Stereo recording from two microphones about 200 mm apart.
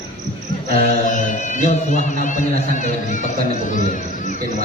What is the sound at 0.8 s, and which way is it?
Speech, 40° left (ahead or behind).